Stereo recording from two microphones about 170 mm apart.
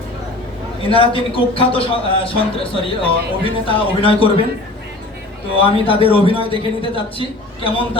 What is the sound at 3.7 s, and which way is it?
Speech, 30° left (ahead or behind).